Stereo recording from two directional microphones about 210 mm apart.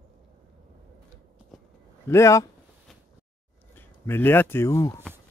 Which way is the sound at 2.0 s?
15° left (ahead or behind).